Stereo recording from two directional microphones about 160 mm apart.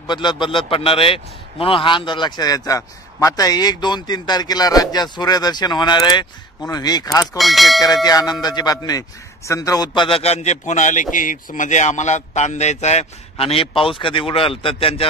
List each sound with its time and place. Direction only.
0.0 s a man's voice: 30° left (ahead or behind)
7.3 s speech: centre (ahead or behind)
7.8 s a man's voice: 25° left (ahead or behind)